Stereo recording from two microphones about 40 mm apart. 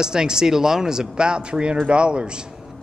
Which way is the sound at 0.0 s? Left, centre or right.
Centre.